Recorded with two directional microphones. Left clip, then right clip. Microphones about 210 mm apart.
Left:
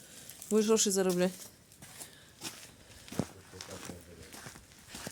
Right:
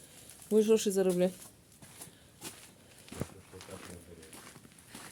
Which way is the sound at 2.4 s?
50° left (ahead or behind).